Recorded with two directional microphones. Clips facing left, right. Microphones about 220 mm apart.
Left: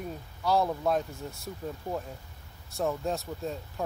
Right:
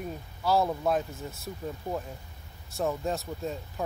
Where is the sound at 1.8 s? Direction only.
20° right (ahead or behind).